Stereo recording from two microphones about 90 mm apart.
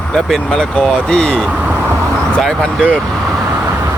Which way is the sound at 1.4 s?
15° right (ahead or behind).